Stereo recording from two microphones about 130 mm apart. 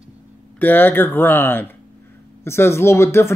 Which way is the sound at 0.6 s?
15° left (ahead or behind).